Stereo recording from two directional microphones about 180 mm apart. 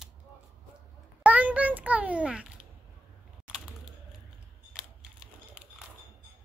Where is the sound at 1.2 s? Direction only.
10° right (ahead or behind).